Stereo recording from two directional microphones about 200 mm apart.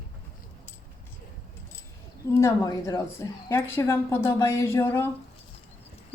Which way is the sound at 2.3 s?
15° left (ahead or behind).